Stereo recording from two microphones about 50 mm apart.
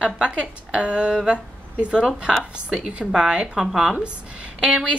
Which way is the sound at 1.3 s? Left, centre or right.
Right.